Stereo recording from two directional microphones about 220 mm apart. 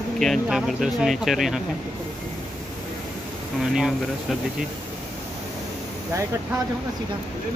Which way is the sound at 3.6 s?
Centre (ahead or behind).